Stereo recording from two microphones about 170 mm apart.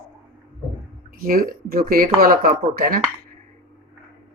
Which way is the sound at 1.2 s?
60° right (ahead or behind).